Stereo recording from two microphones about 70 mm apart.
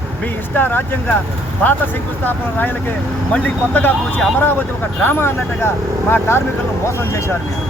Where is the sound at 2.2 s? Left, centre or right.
Left.